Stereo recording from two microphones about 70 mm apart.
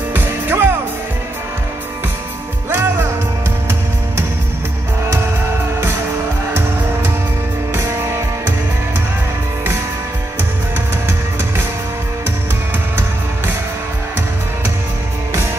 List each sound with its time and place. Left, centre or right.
0.1 s music: right
2.7 s music: right